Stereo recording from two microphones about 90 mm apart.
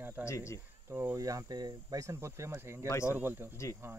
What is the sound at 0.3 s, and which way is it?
Speech, 35° left (ahead or behind).